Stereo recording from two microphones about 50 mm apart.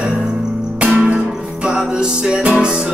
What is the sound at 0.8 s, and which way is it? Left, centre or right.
Music, right.